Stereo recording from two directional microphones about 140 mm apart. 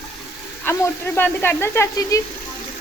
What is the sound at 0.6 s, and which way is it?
Speech, 20° left (ahead or behind).